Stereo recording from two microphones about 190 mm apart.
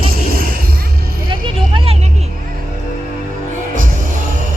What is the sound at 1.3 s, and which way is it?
Speech, 25° right (ahead or behind).